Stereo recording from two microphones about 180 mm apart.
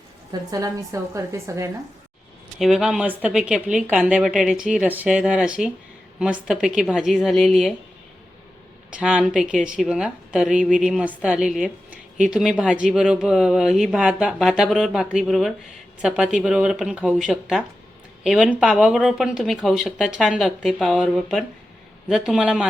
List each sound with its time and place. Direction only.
0.5 s a woman's voice: 20° right (ahead or behind)
2.6 s speech: centre (ahead or behind)
8.9 s speech: 5° right (ahead or behind)